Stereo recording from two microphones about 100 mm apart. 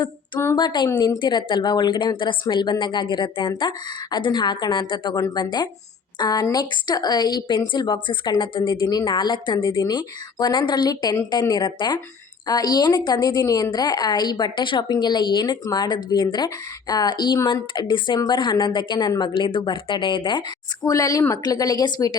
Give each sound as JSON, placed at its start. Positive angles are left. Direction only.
{"t": 0.5, "sound": "a woman's voice", "side_deg": 45}
{"t": 20.8, "sound": "a woman's voice", "side_deg": 35}